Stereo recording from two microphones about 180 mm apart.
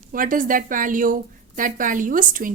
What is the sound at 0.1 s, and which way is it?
A woman's voice, 50° right (ahead or behind).